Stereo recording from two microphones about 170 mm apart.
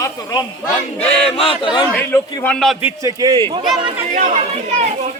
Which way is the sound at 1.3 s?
35° left (ahead or behind).